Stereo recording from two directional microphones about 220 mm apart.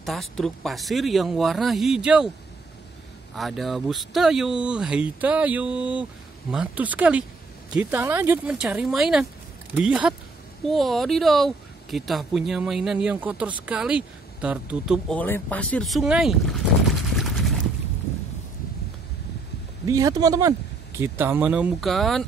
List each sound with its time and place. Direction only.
0.0 s speech: centre (ahead or behind)
3.3 s speech: centre (ahead or behind)
19.9 s speech: 15° right (ahead or behind); by 22.2 s centre (ahead or behind)